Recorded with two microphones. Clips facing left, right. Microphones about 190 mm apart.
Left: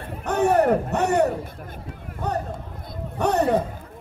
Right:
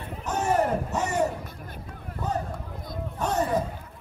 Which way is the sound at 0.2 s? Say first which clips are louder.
Left 6 dB; 60° left (ahead or behind).